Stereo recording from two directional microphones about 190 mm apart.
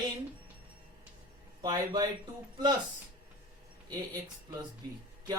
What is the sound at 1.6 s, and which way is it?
Speech, 20° right (ahead or behind).